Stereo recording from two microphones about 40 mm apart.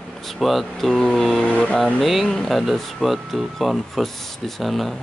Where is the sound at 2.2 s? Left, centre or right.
Centre.